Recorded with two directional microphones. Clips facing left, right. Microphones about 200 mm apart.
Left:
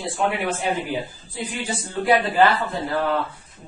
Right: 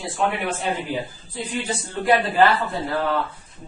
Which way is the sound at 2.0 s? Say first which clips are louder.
Even; centre (ahead or behind).